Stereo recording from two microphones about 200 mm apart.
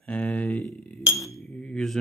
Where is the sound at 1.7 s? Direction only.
Centre (ahead or behind).